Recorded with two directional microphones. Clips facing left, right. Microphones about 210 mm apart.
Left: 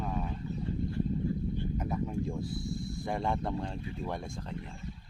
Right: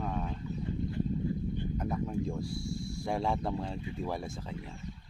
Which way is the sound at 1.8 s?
5° left (ahead or behind).